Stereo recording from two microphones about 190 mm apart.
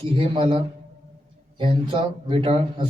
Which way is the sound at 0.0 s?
30° right (ahead or behind).